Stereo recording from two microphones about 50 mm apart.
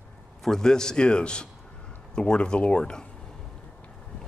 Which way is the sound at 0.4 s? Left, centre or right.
Centre.